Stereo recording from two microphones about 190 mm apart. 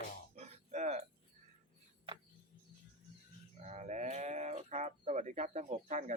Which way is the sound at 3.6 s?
40° right (ahead or behind).